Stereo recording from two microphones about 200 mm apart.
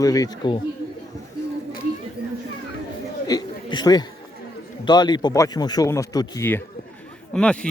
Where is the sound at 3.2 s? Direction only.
20° left (ahead or behind).